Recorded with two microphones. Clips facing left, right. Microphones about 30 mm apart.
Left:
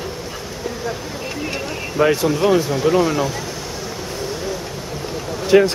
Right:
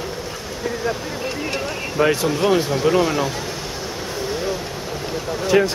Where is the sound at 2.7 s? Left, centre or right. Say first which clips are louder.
Left 1 dB; centre.